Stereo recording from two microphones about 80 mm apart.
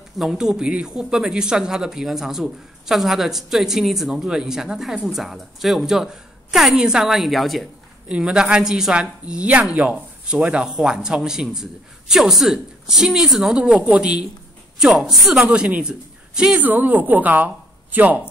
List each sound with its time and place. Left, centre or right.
0.2 s speech: centre
8.1 s speech: centre
13.6 s speech: centre
14.8 s speech: centre
15.4 s a man's voice: centre
16.6 s a woman's voice: right